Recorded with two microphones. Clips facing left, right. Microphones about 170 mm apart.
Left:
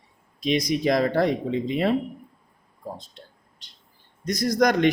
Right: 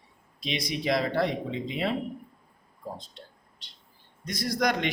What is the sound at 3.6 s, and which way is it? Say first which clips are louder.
Bird: right 2 dB; 45° left (ahead or behind).